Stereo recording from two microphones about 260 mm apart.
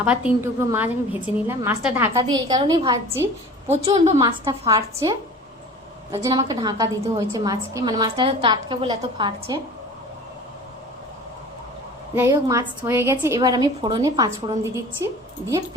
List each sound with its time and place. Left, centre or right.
0.0 s a woman's voice: centre
12.1 s a woman's voice: centre